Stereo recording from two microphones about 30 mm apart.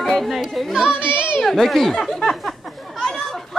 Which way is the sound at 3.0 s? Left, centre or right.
Centre.